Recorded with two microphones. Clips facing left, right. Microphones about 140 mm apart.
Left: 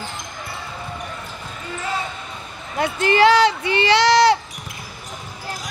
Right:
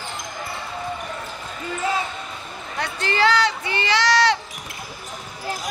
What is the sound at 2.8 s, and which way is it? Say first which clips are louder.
Speech: left 6 dB; 15° left (ahead or behind).